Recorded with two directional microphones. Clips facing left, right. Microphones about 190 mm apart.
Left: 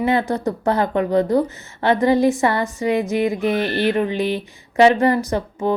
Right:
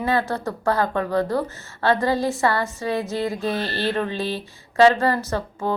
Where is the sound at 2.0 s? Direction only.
20° left (ahead or behind).